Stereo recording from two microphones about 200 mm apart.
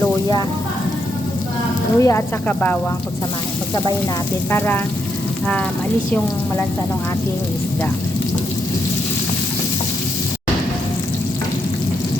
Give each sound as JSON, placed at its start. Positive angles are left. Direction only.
{"t": 0.0, "sound": "a sound", "side_deg": 20}
{"t": 2.0, "sound": "speech", "side_deg": 15}
{"t": 4.5, "sound": "speech", "side_deg": 10}